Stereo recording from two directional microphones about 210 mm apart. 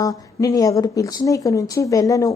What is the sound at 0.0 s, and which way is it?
A woman's voice, 15° left (ahead or behind).